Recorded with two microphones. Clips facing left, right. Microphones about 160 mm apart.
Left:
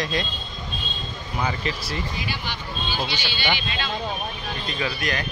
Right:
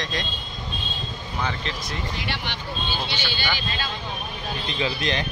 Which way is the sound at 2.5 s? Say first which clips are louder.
Left 1 dB; 65° right (ahead or behind).